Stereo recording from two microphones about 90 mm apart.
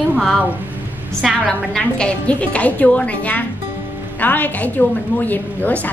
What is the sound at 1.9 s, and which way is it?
A woman's voice, 15° left (ahead or behind).